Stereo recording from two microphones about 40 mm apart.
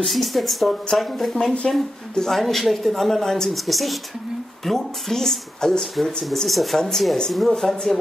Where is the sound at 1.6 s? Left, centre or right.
Centre.